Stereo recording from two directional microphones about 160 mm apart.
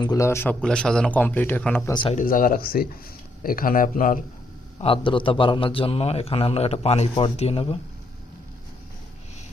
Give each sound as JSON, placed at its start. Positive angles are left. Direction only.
{"t": 0.0, "sound": "a man's voice", "side_deg": 20}
{"t": 0.6, "sound": "a man's voice", "side_deg": 5}
{"t": 1.9, "sound": "speech", "side_deg": 30}
{"t": 2.1, "sound": "speech", "side_deg": 60}
{"t": 4.8, "sound": "a man's voice", "side_deg": 35}